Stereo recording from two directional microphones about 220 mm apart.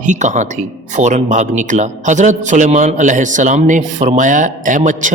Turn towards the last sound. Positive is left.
turn(degrees=-35)  # may be behind; listen again after turning